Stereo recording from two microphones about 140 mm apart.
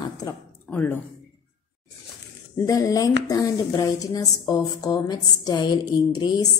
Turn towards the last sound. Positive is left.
turn(degrees=30)  # may be behind; listen again after turning